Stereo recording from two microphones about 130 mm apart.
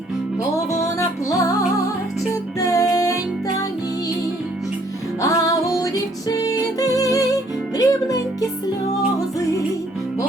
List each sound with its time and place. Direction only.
0.7 s music: 25° left (ahead or behind)
2.6 s music: 25° left (ahead or behind)
5.2 s music: 25° left (ahead or behind)